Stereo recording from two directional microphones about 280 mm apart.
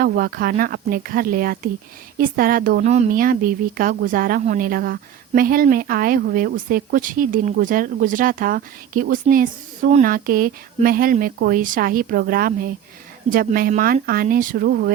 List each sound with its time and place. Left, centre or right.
0.0 s a woman's voice: right